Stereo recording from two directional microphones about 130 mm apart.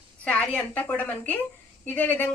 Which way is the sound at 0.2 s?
10° left (ahead or behind).